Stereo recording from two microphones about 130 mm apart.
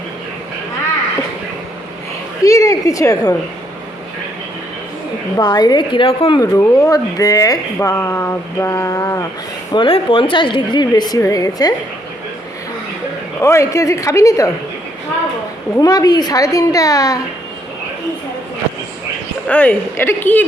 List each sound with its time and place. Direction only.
2.4 s a woman's voice: 25° left (ahead or behind)
5.4 s a woman's voice: 30° left (ahead or behind)
6.4 s speech: 20° left (ahead or behind)
9.7 s a woman's voice: 40° left (ahead or behind)
13.4 s speech: 20° left (ahead or behind)
15.8 s speech: 30° left (ahead or behind)
19.5 s speech: 10° left (ahead or behind)